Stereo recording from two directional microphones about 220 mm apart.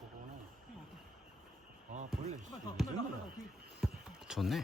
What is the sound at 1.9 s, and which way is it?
Speech, 35° right (ahead or behind).